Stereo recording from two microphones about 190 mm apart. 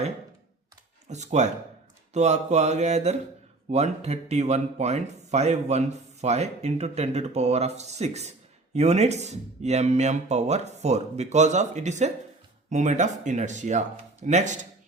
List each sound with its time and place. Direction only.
1.0 s speech: 35° right (ahead or behind)